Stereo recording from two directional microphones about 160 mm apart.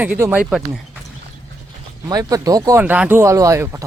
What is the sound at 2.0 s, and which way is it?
Speech, 25° right (ahead or behind).